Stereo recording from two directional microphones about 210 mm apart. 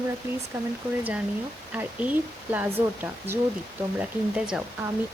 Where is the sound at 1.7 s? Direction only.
5° right (ahead or behind).